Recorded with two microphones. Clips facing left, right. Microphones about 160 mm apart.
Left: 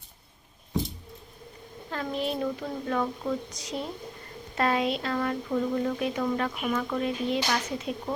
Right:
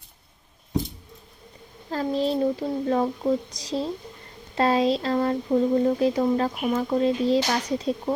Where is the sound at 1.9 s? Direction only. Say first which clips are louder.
Right 6 dB; 35° right (ahead or behind).